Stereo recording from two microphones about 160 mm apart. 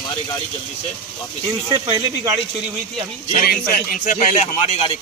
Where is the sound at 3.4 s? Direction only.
60° left (ahead or behind).